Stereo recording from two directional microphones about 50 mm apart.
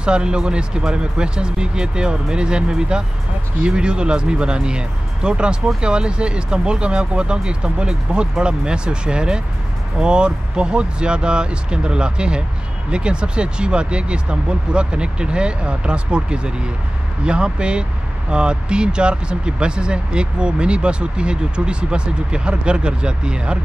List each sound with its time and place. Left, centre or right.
0.0 s speech: centre